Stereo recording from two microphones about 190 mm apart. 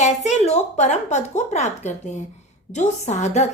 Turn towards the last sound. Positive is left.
turn(degrees=35)  # may be behind; listen again after turning